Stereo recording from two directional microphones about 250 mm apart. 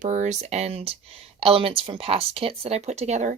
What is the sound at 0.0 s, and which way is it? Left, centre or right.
Speech, right.